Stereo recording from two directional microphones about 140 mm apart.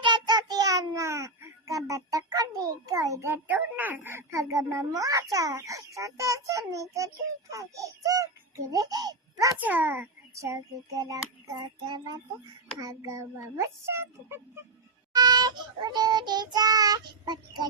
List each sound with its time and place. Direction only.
0.0 s a child's voice: 30° right (ahead or behind)
9.6 s a child's voice: 10° right (ahead or behind)
15.1 s child singing: 30° right (ahead or behind)